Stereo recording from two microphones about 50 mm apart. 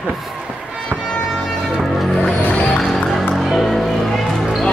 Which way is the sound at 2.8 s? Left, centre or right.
Centre.